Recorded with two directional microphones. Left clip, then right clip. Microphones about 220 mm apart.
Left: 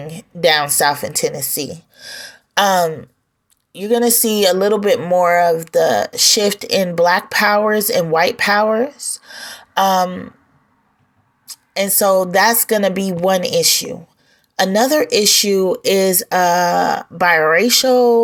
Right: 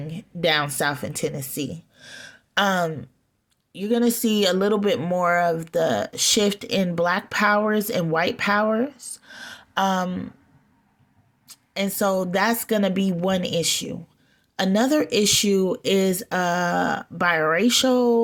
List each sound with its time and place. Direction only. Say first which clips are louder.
0.0 s speech: left 8 dB; 25° right (ahead or behind)
11.4 s speech: left 8 dB; 25° right (ahead or behind)